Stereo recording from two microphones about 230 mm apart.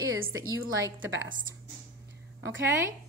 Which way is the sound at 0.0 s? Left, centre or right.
Right.